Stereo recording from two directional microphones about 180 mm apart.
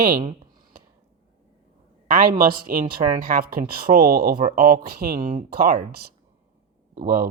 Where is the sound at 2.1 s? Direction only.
50° right (ahead or behind).